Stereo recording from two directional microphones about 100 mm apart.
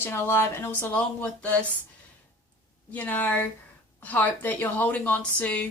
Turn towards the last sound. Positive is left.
turn(degrees=15)  # may be behind; listen again after turning